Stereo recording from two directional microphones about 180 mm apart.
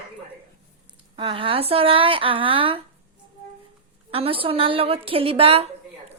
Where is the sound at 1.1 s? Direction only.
30° right (ahead or behind).